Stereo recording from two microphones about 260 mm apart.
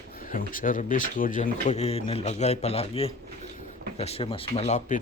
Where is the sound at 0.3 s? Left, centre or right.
Left.